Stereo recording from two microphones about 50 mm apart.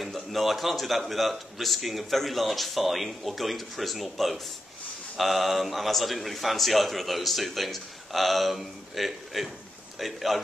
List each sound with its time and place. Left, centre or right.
0.0 s a man's voice: centre